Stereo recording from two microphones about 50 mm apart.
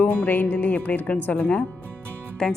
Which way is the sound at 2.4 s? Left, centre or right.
Centre.